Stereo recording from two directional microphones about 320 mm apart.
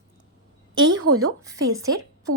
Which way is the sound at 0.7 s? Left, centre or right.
Right.